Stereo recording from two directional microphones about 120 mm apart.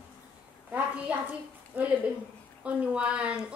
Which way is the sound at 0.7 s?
15° right (ahead or behind).